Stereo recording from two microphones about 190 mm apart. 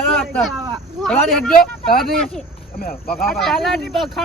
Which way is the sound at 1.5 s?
50° left (ahead or behind).